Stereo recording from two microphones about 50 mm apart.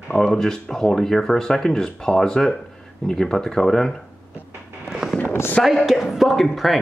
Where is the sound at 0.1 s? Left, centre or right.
Centre.